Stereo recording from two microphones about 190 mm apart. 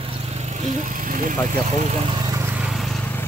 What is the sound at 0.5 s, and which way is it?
Speech, 40° right (ahead or behind).